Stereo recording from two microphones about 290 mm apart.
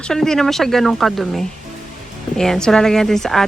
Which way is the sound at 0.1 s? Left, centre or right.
Centre.